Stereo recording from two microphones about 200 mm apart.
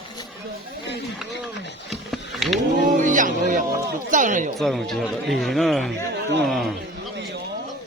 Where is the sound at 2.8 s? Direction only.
40° right (ahead or behind).